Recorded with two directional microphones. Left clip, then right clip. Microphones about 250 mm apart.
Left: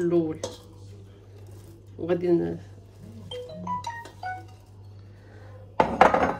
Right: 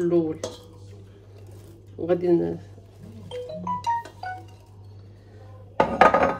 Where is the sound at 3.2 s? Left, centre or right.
Centre.